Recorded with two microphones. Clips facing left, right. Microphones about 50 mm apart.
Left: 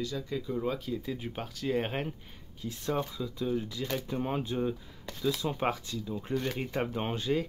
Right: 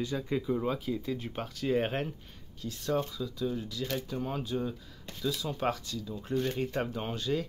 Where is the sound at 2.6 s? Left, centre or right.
Centre.